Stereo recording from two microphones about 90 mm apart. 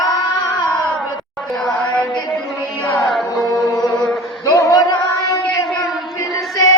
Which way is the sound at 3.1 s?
55° left (ahead or behind).